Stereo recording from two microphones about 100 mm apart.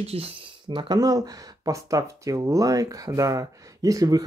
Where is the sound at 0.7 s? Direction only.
45° right (ahead or behind).